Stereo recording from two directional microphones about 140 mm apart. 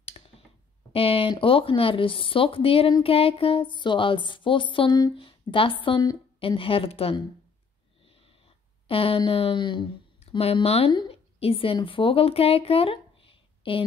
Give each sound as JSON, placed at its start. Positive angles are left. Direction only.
{"t": 0.2, "sound": "a sound", "side_deg": 45}
{"t": 0.9, "sound": "a woman's voice", "side_deg": 40}
{"t": 8.8, "sound": "a woman's voice", "side_deg": 40}
{"t": 10.9, "sound": "a woman's voice", "side_deg": 30}
{"t": 11.3, "sound": "speech", "side_deg": 40}